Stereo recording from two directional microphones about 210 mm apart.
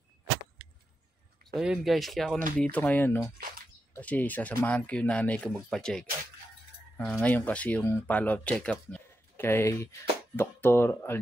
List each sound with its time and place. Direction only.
1.5 s speech: centre (ahead or behind)
2.3 s speech: 40° right (ahead or behind)
2.7 s speech: 5° left (ahead or behind)